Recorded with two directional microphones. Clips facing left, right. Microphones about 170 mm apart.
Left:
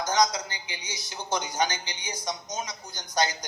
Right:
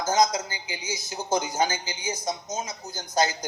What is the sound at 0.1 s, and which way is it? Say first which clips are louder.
Speech: right 3 dB; 25° right (ahead or behind).